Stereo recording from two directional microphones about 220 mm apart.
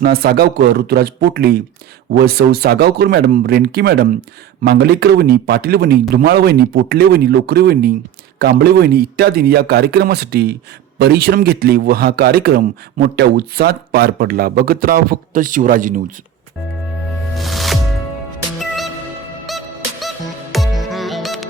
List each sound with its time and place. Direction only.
0.0 s a man's voice: 45° right (ahead or behind)
17.3 s music: centre (ahead or behind)
19.5 s music: centre (ahead or behind)